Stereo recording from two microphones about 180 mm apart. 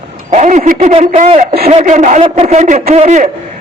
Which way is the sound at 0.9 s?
35° right (ahead or behind).